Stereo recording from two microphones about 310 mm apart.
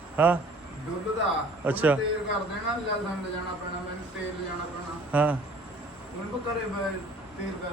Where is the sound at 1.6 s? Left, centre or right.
Centre.